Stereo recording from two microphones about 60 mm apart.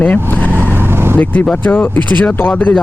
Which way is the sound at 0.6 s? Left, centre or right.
Right.